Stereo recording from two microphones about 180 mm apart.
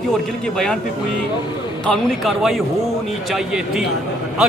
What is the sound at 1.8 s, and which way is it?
A man's voice, centre (ahead or behind).